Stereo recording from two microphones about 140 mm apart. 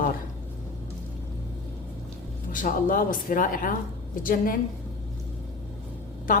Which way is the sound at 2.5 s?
75° left (ahead or behind).